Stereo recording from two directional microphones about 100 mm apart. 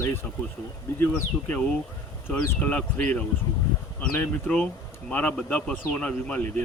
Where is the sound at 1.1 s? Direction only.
15° left (ahead or behind).